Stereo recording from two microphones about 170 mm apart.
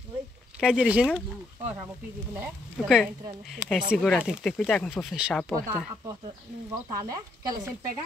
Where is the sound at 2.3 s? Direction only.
10° right (ahead or behind).